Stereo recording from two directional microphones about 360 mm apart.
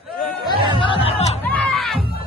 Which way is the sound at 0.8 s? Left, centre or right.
Centre.